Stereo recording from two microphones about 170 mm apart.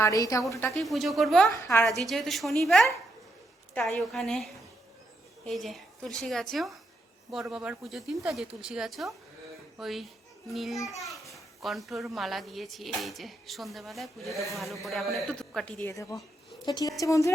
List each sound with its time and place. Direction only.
0.0 s a woman's voice: 20° left (ahead or behind)
0.7 s a child's voice: centre (ahead or behind)
1.5 s a woman's voice: 15° left (ahead or behind)
1.8 s a child's voice: centre (ahead or behind); by 17.3 s 20° left (ahead or behind)